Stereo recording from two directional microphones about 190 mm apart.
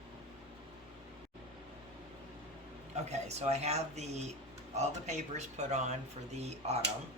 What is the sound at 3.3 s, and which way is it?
Speech, 35° right (ahead or behind).